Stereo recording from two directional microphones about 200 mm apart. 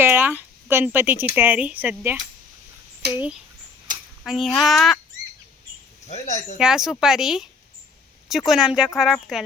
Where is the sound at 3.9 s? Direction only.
40° right (ahead or behind).